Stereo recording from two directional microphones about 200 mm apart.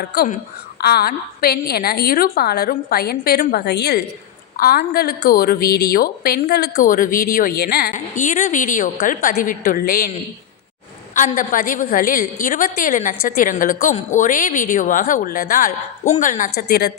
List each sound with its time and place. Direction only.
0.0 s a woman's voice: 50° left (ahead or behind)
6.7 s a woman's voice: 40° left (ahead or behind)
11.1 s a woman's voice: 40° left (ahead or behind)